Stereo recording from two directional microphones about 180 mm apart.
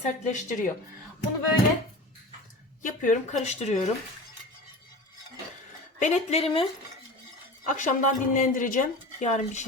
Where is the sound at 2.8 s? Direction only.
45° left (ahead or behind).